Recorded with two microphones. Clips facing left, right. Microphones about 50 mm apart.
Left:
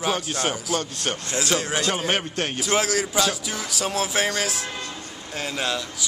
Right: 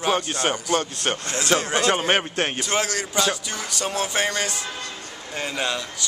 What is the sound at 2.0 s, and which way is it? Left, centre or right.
Speech, right.